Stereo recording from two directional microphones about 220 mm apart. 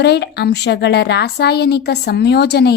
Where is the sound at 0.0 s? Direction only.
50° left (ahead or behind).